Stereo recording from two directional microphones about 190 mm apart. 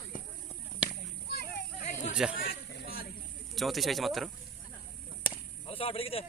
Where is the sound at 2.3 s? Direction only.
50° left (ahead or behind).